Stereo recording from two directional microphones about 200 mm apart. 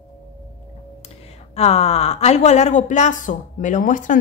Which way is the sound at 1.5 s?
30° left (ahead or behind).